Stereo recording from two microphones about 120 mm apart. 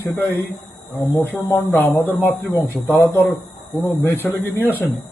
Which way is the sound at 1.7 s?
15° left (ahead or behind).